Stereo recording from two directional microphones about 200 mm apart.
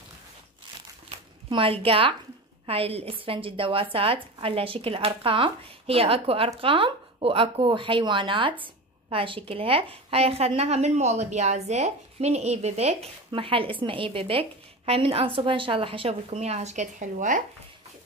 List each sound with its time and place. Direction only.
1.5 s speech: 25° right (ahead or behind)